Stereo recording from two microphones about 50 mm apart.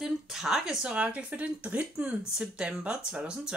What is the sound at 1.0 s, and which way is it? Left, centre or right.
Speech, right.